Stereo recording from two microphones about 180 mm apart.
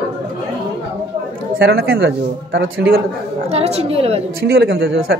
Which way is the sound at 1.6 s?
60° right (ahead or behind).